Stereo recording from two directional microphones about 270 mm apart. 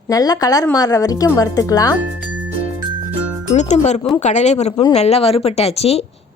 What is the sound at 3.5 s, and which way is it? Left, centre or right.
Speech, left.